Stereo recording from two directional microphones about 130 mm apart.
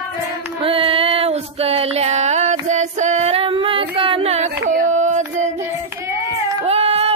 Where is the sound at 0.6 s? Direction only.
45° right (ahead or behind); by 5.2 s 65° right (ahead or behind).